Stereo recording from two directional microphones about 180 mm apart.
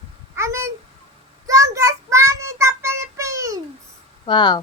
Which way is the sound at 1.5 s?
20° right (ahead or behind).